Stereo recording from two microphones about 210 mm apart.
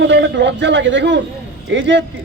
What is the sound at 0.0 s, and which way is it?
A man's voice, 55° right (ahead or behind).